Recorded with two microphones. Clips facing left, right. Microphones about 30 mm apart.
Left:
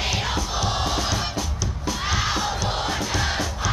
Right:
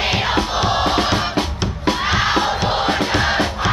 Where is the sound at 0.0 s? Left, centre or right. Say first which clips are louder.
Right 7 dB; right.